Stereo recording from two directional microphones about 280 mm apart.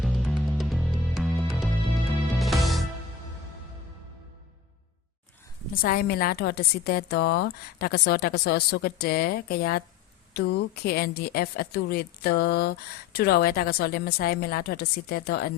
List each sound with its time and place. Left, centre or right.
0.0 s music: centre
5.7 s a woman's voice: left